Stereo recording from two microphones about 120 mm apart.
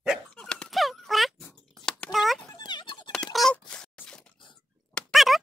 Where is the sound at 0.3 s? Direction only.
10° left (ahead or behind).